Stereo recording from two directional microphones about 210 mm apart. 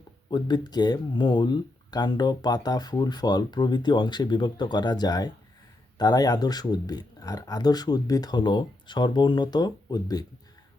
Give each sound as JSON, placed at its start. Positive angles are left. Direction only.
{"t": 0.3, "sound": "speech", "side_deg": 20}